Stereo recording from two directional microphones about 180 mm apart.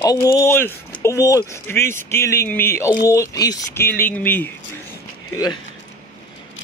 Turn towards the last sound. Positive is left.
turn(degrees=20)  # may be behind; listen again after turning